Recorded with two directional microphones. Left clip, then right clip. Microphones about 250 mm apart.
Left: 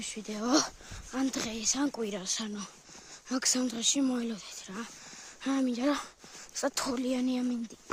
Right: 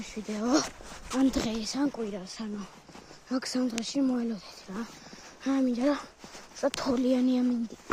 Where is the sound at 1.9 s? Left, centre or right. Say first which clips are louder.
Left 2 dB; left.